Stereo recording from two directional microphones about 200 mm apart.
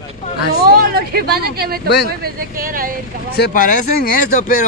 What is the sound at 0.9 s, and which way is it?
A woman's voice, 50° right (ahead or behind).